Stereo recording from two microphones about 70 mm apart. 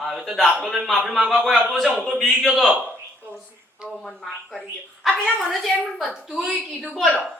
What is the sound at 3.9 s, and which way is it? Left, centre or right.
A woman's voice, centre.